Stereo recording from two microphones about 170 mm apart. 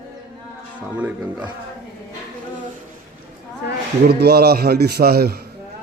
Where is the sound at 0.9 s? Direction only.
10° right (ahead or behind).